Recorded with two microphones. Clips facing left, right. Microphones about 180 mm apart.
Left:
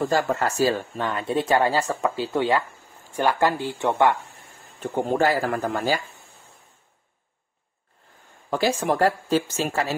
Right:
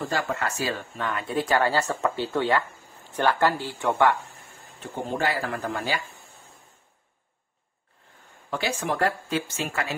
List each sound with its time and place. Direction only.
0.1 s speech: 40° left (ahead or behind)
0.9 s speech: 25° left (ahead or behind)
4.9 s speech: 45° left (ahead or behind)
8.5 s speech: 40° left (ahead or behind)